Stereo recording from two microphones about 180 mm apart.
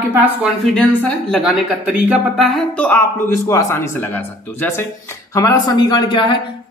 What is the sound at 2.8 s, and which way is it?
A man's voice, 15° left (ahead or behind).